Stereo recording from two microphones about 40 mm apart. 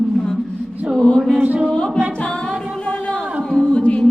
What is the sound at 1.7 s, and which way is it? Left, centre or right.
Music, left.